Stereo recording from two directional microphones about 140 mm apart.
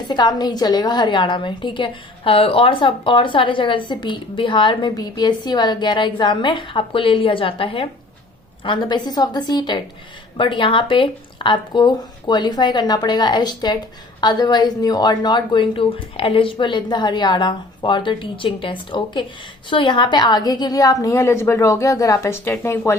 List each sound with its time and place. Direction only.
0.1 s a woman's voice: 30° left (ahead or behind)